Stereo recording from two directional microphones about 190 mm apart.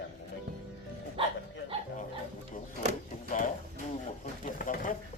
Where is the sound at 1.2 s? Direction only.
30° right (ahead or behind).